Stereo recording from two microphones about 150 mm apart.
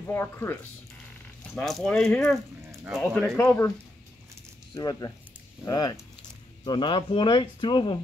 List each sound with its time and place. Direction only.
0.1 s speech: 15° left (ahead or behind)
1.5 s speech: centre (ahead or behind)
3.3 s speech: 15° left (ahead or behind)
4.7 s speech: 25° left (ahead or behind)